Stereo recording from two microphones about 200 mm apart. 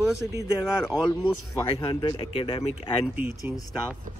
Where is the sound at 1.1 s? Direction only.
25° left (ahead or behind).